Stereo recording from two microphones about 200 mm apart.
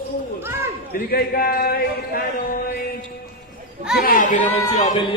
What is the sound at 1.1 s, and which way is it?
Speech, 50° left (ahead or behind).